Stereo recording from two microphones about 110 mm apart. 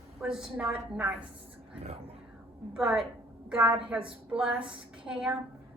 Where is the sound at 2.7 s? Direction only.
5° right (ahead or behind).